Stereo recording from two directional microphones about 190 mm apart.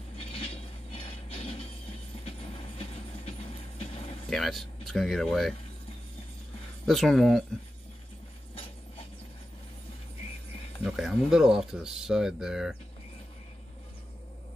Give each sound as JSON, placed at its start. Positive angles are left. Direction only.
{"t": 0.2, "sound": "train", "side_deg": 30}
{"t": 4.3, "sound": "speech", "side_deg": 0}
{"t": 6.9, "sound": "speech", "side_deg": 0}
{"t": 10.8, "sound": "speech", "side_deg": 0}